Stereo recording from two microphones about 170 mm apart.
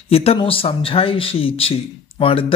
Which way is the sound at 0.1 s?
35° left (ahead or behind).